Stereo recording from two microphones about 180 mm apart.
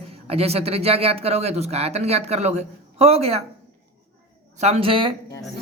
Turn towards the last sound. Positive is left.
turn(degrees=-30)  # may be behind; listen again after turning